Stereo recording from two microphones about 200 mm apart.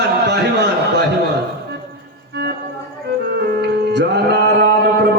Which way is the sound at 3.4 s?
55° right (ahead or behind).